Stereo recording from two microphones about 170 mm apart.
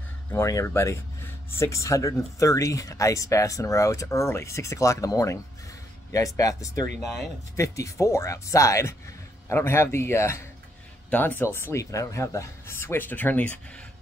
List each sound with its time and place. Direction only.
0.3 s speech: 15° left (ahead or behind)